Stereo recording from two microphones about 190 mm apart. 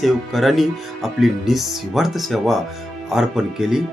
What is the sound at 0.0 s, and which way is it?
Speech, centre (ahead or behind).